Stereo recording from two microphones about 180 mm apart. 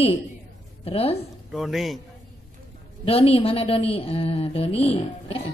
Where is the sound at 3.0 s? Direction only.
30° left (ahead or behind).